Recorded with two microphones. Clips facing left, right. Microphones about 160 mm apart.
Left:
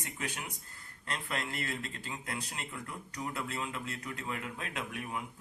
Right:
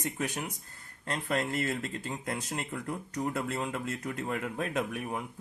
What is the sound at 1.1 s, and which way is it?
Speech, 45° right (ahead or behind).